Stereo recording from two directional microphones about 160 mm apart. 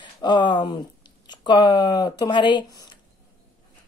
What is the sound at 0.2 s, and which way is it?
Speech, 30° left (ahead or behind).